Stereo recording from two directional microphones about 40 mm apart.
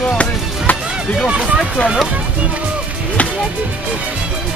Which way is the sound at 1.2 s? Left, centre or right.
Right.